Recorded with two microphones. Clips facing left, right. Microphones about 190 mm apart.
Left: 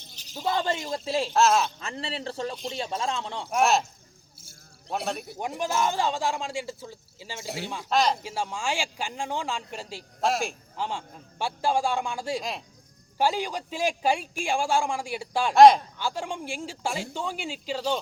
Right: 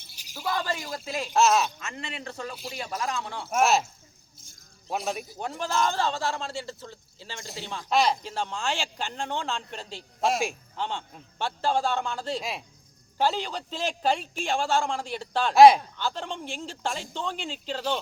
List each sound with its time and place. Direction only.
0.1 s shatter: 10° right (ahead or behind)
0.3 s a man's voice: 25° left (ahead or behind)
1.4 s speech: centre (ahead or behind)
1.8 s a man's voice: 35° left (ahead or behind)
3.5 s speech: 5° right (ahead or behind)
5.4 s a man's voice: 15° left (ahead or behind)
7.9 s speech: centre (ahead or behind)
8.2 s a man's voice: 10° left (ahead or behind)
12.4 s speech: 5° right (ahead or behind)
13.1 s a man's voice: 10° left (ahead or behind)
15.5 s speech: 5° right (ahead or behind)
16.0 s a man's voice: 10° left (ahead or behind)